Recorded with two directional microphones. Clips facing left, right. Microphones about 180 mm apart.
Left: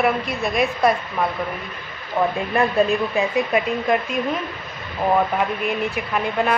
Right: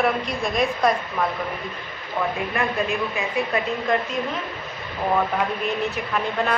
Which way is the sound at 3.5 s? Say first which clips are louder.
Left 1 dB; 10° left (ahead or behind).